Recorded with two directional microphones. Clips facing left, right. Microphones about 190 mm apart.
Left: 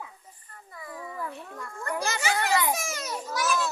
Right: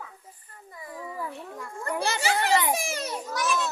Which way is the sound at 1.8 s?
25° right (ahead or behind).